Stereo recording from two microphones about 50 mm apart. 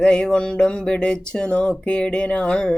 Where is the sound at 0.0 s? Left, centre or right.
Centre.